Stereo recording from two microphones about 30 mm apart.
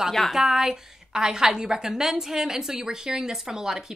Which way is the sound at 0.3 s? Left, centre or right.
Centre.